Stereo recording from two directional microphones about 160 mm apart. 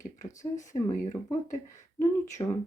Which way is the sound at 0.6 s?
20° left (ahead or behind).